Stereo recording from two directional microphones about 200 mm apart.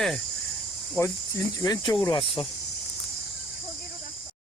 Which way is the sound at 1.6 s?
20° left (ahead or behind).